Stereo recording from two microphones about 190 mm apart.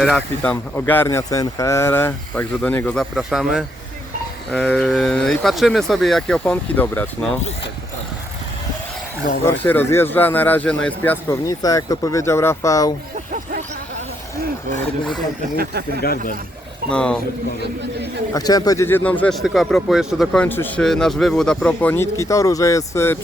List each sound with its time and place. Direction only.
0.0 s speech: 5° left (ahead or behind)
9.4 s speech: 10° left (ahead or behind)
13.3 s a sound: 45° right (ahead or behind)
16.9 s speech: 5° left (ahead or behind)
18.3 s speech: 20° left (ahead or behind)